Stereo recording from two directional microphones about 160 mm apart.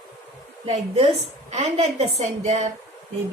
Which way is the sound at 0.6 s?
40° right (ahead or behind).